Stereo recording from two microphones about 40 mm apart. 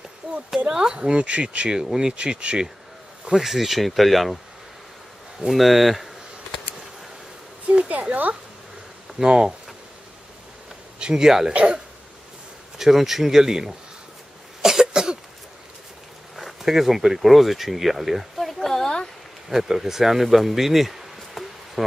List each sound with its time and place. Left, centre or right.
0.7 s speech: centre
0.9 s speech: right
1.8 s speech: centre
3.3 s speech: centre
5.5 s speech: centre
7.9 s speech: right
9.2 s speech: right
11.0 s a sound: right
11.2 s speech: centre
12.7 s speech: centre
14.6 s cough: centre
16.3 s speech: centre
18.5 s a sound: centre
19.5 s speech: centre